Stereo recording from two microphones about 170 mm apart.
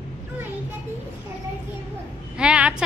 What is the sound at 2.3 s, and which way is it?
Speech, 5° right (ahead or behind).